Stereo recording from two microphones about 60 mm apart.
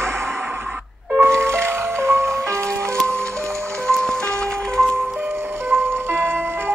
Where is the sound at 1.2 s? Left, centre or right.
Right.